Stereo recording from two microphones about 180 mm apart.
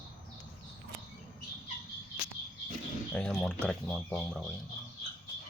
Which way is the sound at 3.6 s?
5° left (ahead or behind).